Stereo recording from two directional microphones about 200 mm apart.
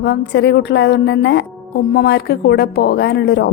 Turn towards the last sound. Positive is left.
turn(degrees=55)  # may be behind; listen again after turning